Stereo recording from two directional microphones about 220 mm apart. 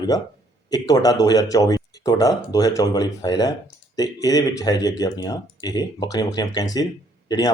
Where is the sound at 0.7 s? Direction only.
15° left (ahead or behind).